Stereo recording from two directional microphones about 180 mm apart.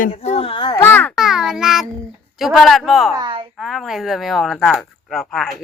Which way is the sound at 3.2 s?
25° right (ahead or behind).